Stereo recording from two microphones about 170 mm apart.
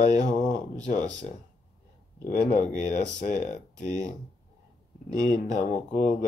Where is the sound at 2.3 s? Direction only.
45° left (ahead or behind).